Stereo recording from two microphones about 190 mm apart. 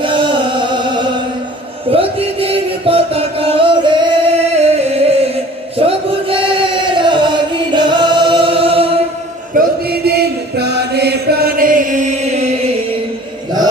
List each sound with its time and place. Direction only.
0.0 s music: 25° right (ahead or behind)
5.8 s chant: 30° right (ahead or behind)
7.0 s music: 25° right (ahead or behind)
9.6 s chant: 55° right (ahead or behind)